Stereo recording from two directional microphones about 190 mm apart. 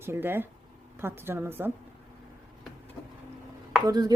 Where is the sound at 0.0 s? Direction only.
10° right (ahead or behind).